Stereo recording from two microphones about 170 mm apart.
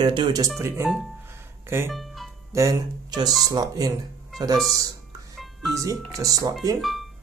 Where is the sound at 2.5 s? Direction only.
20° right (ahead or behind).